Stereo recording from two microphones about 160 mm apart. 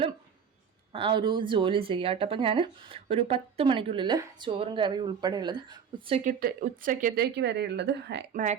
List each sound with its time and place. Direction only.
0.9 s speech: 30° right (ahead or behind)
6.2 s speech: 60° right (ahead or behind)
7.2 s speech: 90° right
8.3 s speech: 55° right (ahead or behind)